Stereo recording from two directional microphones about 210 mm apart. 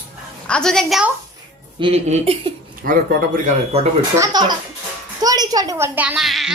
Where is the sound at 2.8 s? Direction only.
40° right (ahead or behind).